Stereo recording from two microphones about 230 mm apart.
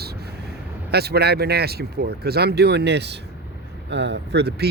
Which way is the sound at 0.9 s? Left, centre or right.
Right.